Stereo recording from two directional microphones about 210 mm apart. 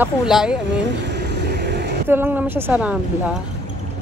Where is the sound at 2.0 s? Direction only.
10° right (ahead or behind).